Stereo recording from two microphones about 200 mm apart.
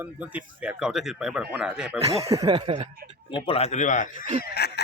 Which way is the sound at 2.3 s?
20° right (ahead or behind).